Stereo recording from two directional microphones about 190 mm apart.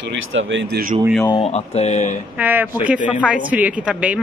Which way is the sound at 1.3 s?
35° left (ahead or behind).